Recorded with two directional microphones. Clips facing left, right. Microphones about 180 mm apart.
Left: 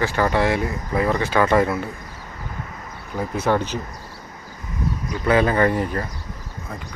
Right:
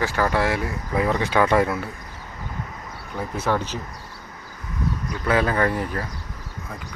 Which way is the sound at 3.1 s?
10° left (ahead or behind).